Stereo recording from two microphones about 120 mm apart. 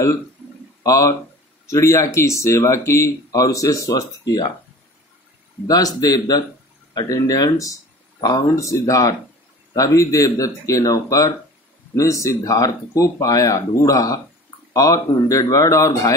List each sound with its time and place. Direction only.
0.8 s speech: 25° left (ahead or behind)
5.7 s speech: 30° left (ahead or behind)